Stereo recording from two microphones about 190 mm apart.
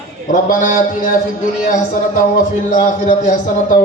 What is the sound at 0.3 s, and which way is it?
Speech, 45° left (ahead or behind).